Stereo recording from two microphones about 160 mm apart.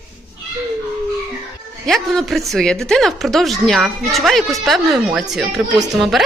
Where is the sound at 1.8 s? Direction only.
Centre (ahead or behind).